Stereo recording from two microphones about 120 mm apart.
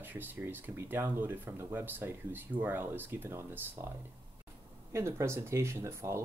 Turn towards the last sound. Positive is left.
turn(degrees=-25)  # may be behind; listen again after turning